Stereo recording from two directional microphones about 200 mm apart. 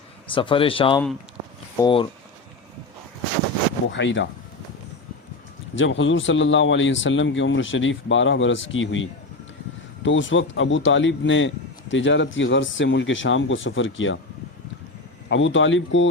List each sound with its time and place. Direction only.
0.3 s speech: 25° left (ahead or behind)
3.8 s speech: 65° left (ahead or behind)
5.7 s speech: 70° left (ahead or behind)
15.3 s speech: 70° left (ahead or behind)